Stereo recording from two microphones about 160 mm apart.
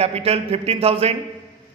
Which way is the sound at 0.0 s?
40° right (ahead or behind).